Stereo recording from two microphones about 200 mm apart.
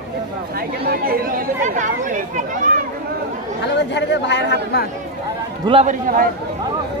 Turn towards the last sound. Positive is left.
turn(degrees=-45)  # may be behind; listen again after turning